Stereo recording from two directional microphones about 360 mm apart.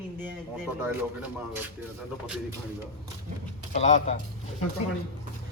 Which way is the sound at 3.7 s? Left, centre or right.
Centre.